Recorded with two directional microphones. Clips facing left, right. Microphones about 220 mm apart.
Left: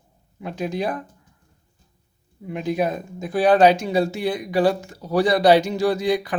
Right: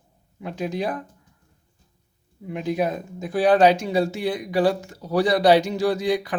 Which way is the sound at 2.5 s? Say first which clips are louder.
Left 1 dB; 50° left (ahead or behind).